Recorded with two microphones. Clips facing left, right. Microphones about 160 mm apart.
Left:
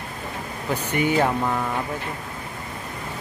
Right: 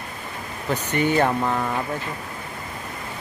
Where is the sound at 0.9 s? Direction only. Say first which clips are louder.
Right 1 dB; 10° left (ahead or behind).